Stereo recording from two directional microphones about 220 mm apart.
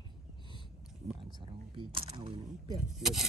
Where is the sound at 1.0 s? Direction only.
25° right (ahead or behind).